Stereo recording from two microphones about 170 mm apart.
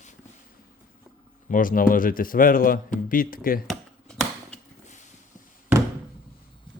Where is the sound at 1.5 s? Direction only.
55° left (ahead or behind).